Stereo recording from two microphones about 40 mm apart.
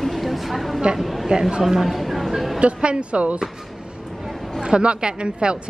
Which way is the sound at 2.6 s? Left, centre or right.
Right.